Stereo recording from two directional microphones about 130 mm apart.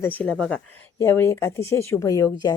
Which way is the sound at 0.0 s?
15° left (ahead or behind).